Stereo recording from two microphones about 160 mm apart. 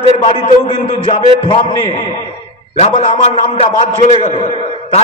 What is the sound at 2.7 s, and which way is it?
A man's voice, 40° left (ahead or behind).